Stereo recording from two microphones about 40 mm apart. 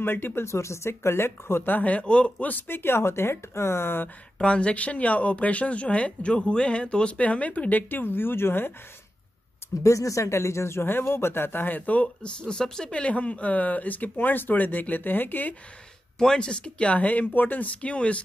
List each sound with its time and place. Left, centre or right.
0.0 s speech: left
1.7 s speech: left
2.7 s speech: left
4.4 s speech: left
7.2 s speech: left
7.9 s speech: left
9.6 s a sound: left
10.7 s speech: left
12.2 s speech: left
12.9 s speech: left
16.3 s speech: left